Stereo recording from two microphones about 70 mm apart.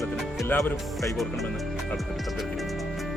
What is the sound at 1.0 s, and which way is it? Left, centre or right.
Speech, centre.